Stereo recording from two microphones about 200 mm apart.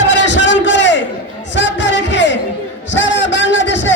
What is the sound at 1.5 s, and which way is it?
Music, 65° left (ahead or behind).